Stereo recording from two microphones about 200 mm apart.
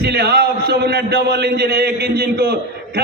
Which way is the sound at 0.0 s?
55° right (ahead or behind).